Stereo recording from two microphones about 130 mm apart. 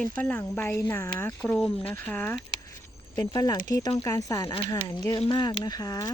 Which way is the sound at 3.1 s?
30° left (ahead or behind).